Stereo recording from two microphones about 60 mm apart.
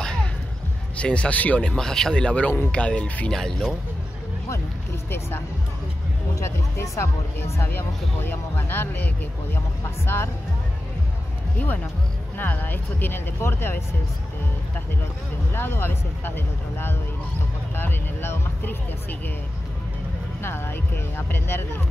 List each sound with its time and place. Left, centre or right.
0.0 s a sound: centre
0.9 s speech: centre
1.6 s speech: centre
6.4 s speech: left
11.5 s speech: left
15.5 s speech: left
20.4 s speech: left